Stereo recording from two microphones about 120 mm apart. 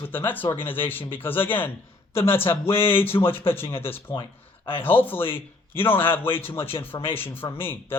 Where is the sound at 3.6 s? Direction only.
50° left (ahead or behind).